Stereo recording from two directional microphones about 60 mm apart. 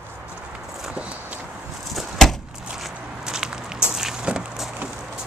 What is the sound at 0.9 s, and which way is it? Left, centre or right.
Walk, right.